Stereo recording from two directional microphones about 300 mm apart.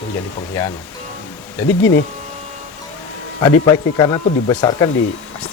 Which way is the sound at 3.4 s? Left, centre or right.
Centre.